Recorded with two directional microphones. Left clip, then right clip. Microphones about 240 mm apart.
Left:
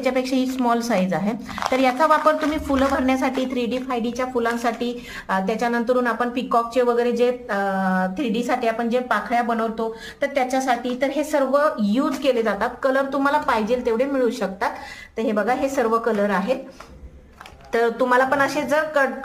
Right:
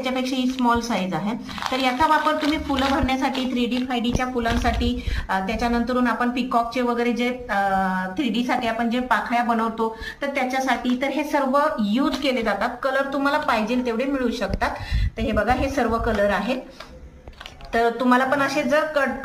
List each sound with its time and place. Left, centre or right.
0.0 s a woman's voice: left
17.7 s a woman's voice: left